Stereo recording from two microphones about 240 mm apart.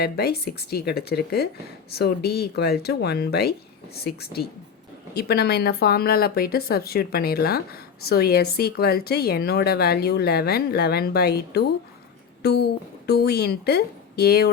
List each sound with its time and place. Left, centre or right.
0.0 s speech: left